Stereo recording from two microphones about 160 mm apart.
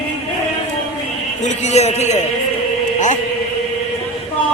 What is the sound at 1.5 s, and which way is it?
Speech, 45° left (ahead or behind).